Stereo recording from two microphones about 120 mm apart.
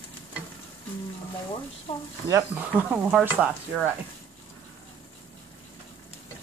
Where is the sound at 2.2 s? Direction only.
25° right (ahead or behind).